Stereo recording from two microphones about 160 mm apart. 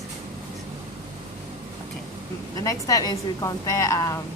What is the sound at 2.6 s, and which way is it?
A woman's voice, 20° left (ahead or behind).